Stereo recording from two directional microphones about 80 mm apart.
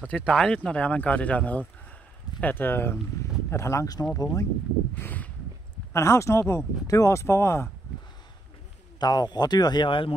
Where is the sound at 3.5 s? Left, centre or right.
Left.